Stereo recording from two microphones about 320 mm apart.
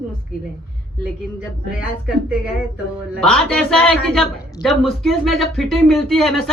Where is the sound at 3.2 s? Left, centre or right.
Centre.